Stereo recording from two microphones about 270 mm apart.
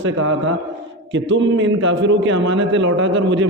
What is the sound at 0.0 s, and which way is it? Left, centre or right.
Speech, right.